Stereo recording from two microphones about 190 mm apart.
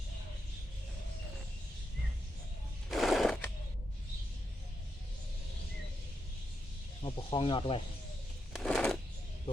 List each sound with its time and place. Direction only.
2.9 s a sound: centre (ahead or behind)
7.0 s speech: 25° left (ahead or behind)
8.5 s shuffling cards: centre (ahead or behind)